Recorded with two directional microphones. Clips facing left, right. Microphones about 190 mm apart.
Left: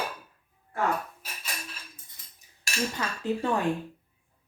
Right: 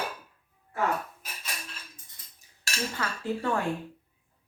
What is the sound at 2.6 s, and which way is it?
Cutlery, 20° left (ahead or behind).